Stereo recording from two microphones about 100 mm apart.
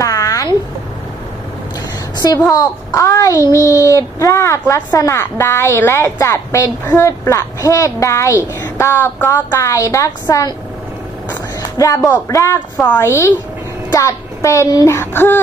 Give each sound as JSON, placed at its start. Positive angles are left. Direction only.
{"t": 0.0, "sound": "a sound", "side_deg": 35}
{"t": 2.1, "sound": "a woman's voice", "side_deg": 35}
{"t": 11.8, "sound": "a woman's voice", "side_deg": 35}
{"t": 12.7, "sound": "a woman's voice", "side_deg": 15}
{"t": 13.0, "sound": "a woman's voice", "side_deg": 25}
{"t": 14.9, "sound": "a woman's voice", "side_deg": 25}